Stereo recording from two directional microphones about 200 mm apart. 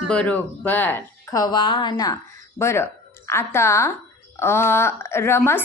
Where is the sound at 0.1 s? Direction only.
5° left (ahead or behind).